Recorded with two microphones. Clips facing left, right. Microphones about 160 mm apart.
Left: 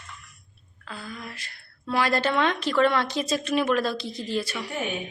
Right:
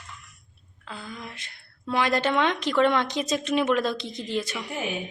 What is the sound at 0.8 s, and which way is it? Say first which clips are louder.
A woman's voice: even; 20° right (ahead or behind).